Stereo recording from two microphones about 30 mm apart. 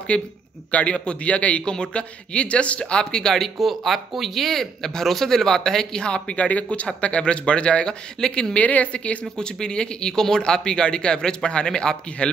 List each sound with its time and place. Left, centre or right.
0.1 s a man's voice: left
1.7 s speech: left
2.8 s speech: left
3.6 s speech: centre
6.0 s speech: left
6.3 s a man's voice: left
7.2 s speech: left
8.2 s speech: centre
8.5 s a man's voice: left
9.2 s speech: left